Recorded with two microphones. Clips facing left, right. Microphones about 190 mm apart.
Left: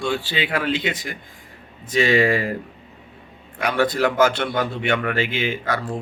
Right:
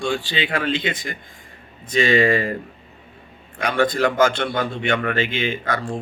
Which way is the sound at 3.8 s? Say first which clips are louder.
Even; 10° left (ahead or behind).